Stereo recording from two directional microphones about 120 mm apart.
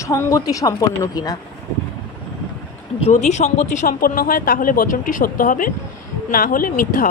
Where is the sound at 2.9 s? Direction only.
70° left (ahead or behind); by 3.9 s 85° left.